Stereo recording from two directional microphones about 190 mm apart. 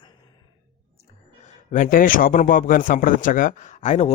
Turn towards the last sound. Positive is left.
turn(degrees=35)  # may be behind; listen again after turning